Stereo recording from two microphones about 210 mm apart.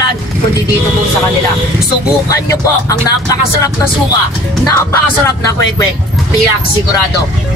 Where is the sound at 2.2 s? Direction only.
15° left (ahead or behind).